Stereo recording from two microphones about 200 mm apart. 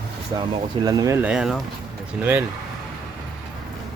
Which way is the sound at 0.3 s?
20° right (ahead or behind).